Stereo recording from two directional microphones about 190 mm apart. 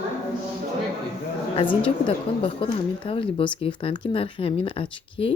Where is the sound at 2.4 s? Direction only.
30° left (ahead or behind).